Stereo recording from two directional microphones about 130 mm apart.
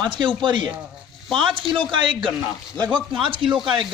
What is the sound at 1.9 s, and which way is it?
Speech, 40° right (ahead or behind).